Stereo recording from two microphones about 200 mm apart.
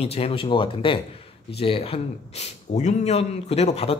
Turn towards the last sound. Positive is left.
turn(degrees=30)  # may be behind; listen again after turning